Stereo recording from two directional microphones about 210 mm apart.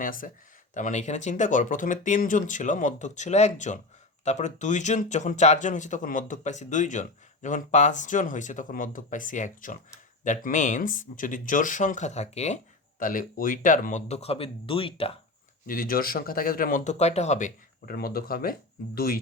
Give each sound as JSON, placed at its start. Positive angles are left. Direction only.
{"t": 0.0, "sound": "speech", "side_deg": 40}
{"t": 15.6, "sound": "speech", "side_deg": 40}